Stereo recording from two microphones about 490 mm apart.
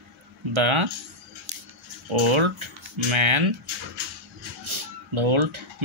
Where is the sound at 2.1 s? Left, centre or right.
Right.